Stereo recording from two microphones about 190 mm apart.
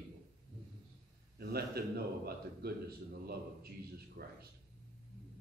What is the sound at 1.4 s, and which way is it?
A man's voice, 55° right (ahead or behind).